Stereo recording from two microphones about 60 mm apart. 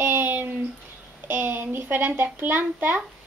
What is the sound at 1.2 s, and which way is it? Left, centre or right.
A child's voice, right.